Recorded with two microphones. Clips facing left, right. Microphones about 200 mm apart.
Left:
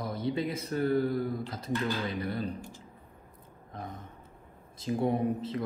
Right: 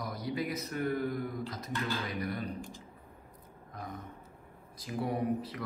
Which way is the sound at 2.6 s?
15° right (ahead or behind).